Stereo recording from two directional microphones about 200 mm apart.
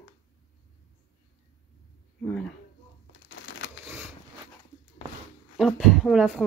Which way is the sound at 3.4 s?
65° left (ahead or behind).